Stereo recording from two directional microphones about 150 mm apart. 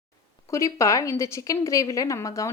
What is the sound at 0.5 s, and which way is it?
Speech, 20° left (ahead or behind).